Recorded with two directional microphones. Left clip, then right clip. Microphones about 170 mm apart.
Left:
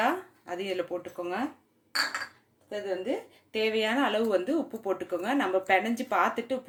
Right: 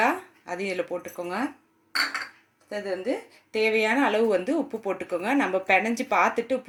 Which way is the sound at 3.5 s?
35° right (ahead or behind).